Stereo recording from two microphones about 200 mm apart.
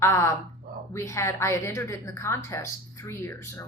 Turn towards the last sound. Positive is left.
turn(degrees=15)  # may be behind; listen again after turning